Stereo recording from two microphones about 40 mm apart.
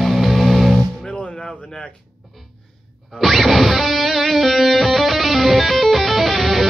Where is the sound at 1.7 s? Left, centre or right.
Centre.